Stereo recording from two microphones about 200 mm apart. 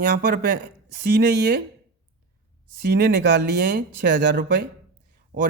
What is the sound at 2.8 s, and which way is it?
Speech, 50° right (ahead or behind).